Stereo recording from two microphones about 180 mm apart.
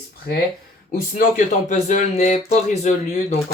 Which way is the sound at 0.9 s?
50° left (ahead or behind).